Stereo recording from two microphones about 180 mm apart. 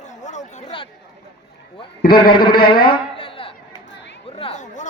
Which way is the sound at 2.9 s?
30° left (ahead or behind).